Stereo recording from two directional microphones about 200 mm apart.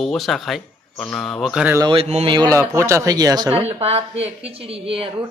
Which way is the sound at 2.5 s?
15° right (ahead or behind).